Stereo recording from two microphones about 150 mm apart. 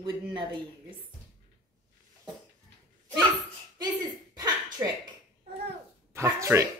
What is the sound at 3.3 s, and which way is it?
Speech, 25° right (ahead or behind).